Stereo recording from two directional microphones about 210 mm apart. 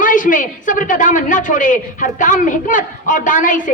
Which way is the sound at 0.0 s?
40° left (ahead or behind).